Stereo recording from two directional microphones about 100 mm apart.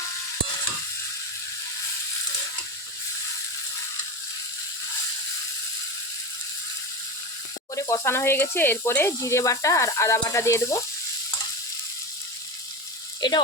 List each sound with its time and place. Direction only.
7.8 s speech: 30° left (ahead or behind)
13.2 s sizzle: 45° left (ahead or behind)